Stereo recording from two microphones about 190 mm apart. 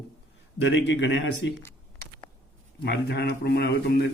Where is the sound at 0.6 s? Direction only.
70° left (ahead or behind).